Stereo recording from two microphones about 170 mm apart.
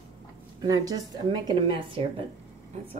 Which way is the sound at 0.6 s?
20° right (ahead or behind).